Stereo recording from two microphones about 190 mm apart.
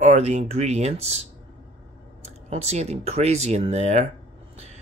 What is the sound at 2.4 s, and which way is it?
Speech, 35° right (ahead or behind).